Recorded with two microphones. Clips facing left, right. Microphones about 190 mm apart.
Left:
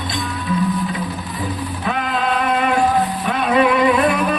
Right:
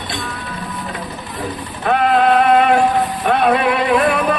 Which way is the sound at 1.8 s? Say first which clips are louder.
Right 8 dB; 60° right (ahead or behind).